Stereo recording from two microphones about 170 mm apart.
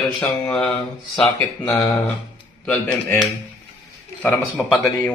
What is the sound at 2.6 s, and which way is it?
Speech, 10° left (ahead or behind).